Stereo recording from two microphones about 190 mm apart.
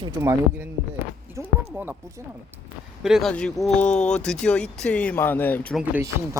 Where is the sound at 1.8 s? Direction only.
10° right (ahead or behind).